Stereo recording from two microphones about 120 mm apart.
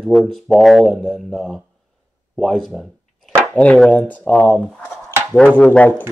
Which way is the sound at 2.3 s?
5° left (ahead or behind).